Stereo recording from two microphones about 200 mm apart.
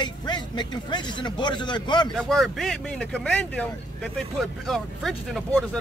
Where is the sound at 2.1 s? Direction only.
Centre (ahead or behind).